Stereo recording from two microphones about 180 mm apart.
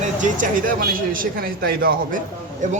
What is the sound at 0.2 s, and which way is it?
Speech, 50° right (ahead or behind).